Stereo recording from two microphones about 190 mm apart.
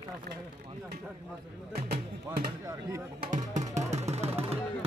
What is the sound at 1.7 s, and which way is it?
Speech, 50° right (ahead or behind).